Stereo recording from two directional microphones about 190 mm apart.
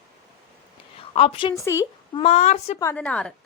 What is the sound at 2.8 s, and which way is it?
Speech, 10° left (ahead or behind).